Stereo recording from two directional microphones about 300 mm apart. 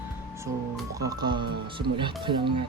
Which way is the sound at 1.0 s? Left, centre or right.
Centre.